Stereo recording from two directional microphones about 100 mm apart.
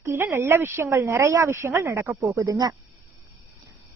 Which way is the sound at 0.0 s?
25° right (ahead or behind).